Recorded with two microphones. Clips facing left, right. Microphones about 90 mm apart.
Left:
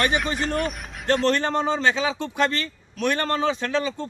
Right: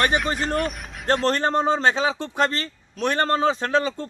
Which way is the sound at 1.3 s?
40° right (ahead or behind).